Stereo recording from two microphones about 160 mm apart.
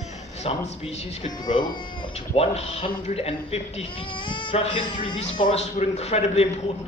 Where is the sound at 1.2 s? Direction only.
55° left (ahead or behind).